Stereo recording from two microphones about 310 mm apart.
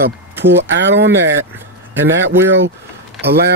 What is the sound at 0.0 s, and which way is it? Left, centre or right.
Speech, right.